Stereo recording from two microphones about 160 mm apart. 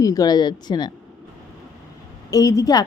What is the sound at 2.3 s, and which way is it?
Speech, 20° left (ahead or behind).